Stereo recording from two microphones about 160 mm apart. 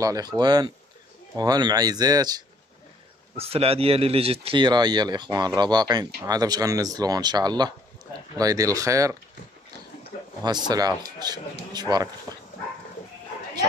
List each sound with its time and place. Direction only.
0.0 s speech: 20° right (ahead or behind)
3.3 s speech: 40° right (ahead or behind); by 9.1 s 20° right (ahead or behind)
10.4 s speech: 25° right (ahead or behind)